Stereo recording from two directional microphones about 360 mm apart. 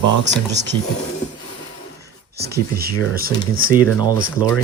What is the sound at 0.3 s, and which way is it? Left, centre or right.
Speech, right.